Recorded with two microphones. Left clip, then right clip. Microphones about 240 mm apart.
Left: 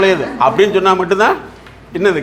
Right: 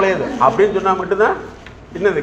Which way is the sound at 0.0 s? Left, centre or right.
Left.